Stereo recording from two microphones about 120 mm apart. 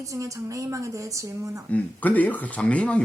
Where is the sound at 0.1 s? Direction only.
25° right (ahead or behind).